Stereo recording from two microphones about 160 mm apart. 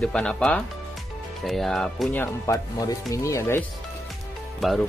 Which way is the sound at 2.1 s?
15° left (ahead or behind).